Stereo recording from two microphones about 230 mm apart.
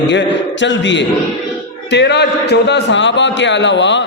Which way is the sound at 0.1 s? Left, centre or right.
Left.